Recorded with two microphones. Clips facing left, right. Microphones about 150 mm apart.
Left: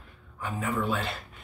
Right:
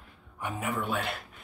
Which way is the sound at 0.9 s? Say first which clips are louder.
Left 1 dB; 10° right (ahead or behind).